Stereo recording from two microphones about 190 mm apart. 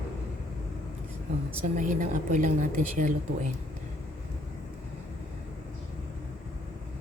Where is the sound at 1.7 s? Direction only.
40° right (ahead or behind).